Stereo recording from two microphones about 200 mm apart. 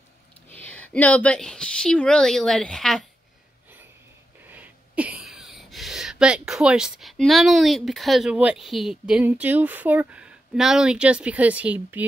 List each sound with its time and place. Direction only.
0.5 s a woman's voice: 10° left (ahead or behind)
4.5 s speech: 5° right (ahead or behind)